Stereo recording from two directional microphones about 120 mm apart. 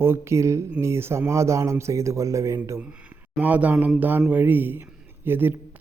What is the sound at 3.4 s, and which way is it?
Speech, 15° right (ahead or behind).